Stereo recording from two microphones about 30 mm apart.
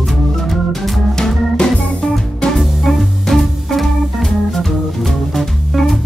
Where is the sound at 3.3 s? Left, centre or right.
Centre.